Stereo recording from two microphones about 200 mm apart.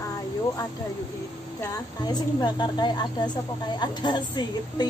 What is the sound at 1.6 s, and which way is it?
A woman's voice, 20° left (ahead or behind).